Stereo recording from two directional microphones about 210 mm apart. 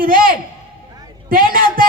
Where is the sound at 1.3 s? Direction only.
40° right (ahead or behind).